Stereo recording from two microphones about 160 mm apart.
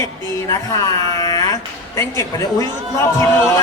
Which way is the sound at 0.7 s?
25° left (ahead or behind).